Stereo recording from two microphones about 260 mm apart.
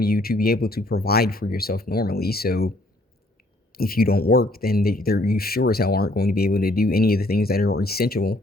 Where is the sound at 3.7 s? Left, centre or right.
Left.